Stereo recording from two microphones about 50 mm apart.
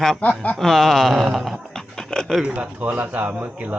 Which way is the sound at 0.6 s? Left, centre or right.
Centre.